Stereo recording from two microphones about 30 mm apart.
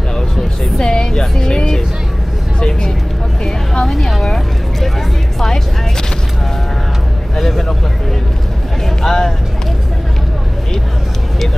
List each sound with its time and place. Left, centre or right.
0.7 s a woman's voice: left
3.8 s a woman's voice: centre
7.3 s a woman's voice: centre
9.0 s a woman's voice: centre